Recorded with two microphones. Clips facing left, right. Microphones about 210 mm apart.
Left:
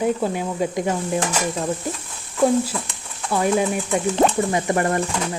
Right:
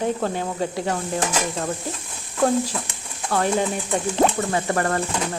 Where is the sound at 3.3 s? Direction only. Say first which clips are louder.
Left 2 dB; 15° left (ahead or behind).